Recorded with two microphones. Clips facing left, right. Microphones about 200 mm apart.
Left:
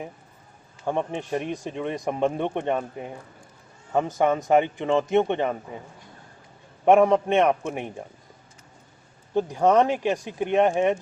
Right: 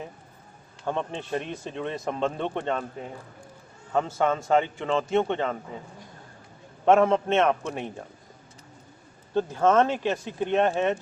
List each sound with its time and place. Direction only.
0.9 s speech: 15° left (ahead or behind)
6.8 s speech: 15° left (ahead or behind)
9.3 s speech: 15° left (ahead or behind)